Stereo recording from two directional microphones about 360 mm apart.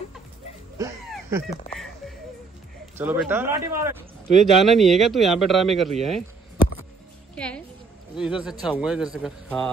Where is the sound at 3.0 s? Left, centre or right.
Centre.